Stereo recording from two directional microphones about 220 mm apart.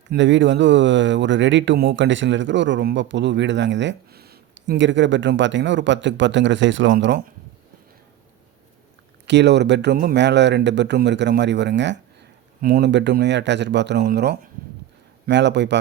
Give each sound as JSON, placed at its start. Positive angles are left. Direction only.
{"t": 0.1, "sound": "speech", "side_deg": -55}
{"t": 9.2, "sound": "speech", "side_deg": -50}